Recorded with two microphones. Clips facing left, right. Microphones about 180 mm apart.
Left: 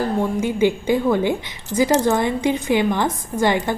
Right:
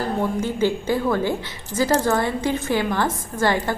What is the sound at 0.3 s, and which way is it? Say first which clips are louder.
A woman's voice: left 3 dB; 15° left (ahead or behind).